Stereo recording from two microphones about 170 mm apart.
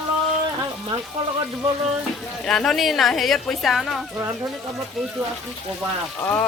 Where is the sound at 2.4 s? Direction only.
5° left (ahead or behind).